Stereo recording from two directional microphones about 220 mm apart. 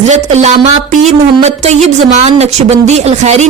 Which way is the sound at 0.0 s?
30° right (ahead or behind).